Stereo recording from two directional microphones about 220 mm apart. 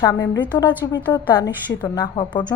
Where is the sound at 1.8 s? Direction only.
20° left (ahead or behind).